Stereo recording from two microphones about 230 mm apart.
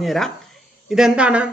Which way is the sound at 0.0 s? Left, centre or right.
Centre.